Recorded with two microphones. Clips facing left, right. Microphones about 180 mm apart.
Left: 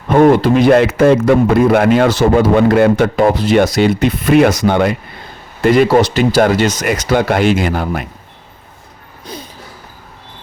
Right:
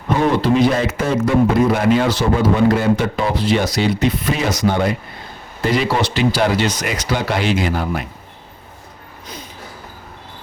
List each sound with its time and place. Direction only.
0.2 s a man's voice: 50° left (ahead or behind)
5.6 s speech: 55° left (ahead or behind)